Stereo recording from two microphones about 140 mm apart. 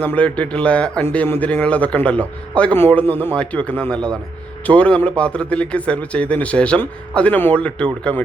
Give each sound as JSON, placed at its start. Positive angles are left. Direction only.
{"t": 0.0, "sound": "a man's voice", "side_deg": 10}